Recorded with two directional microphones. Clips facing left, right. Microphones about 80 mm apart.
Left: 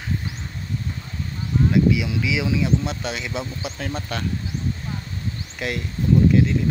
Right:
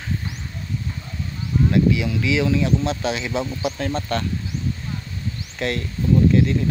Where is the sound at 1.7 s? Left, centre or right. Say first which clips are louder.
Even; centre.